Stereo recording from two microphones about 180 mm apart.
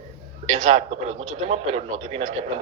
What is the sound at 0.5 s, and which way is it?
A man's voice, 40° right (ahead or behind).